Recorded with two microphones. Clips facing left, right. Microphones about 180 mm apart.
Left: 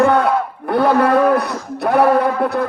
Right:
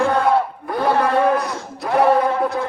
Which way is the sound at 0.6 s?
65° left (ahead or behind).